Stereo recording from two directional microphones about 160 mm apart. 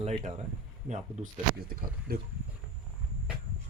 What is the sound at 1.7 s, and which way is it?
Speech, 65° right (ahead or behind).